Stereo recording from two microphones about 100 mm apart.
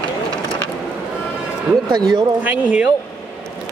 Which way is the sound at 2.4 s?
15° right (ahead or behind).